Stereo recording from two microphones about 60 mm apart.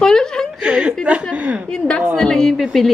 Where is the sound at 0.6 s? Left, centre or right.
Centre.